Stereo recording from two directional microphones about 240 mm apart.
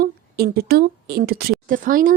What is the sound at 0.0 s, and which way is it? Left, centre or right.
A woman's voice, right.